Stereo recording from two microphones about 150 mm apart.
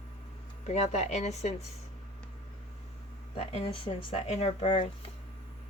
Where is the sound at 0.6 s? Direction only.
50° left (ahead or behind).